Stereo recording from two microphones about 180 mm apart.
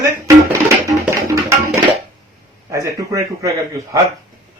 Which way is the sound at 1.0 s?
15° right (ahead or behind).